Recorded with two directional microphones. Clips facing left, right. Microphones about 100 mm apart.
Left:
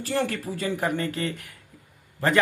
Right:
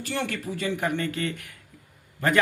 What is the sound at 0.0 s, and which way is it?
Speech, 35° left (ahead or behind).